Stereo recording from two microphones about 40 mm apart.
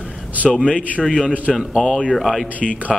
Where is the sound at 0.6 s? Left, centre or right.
Left.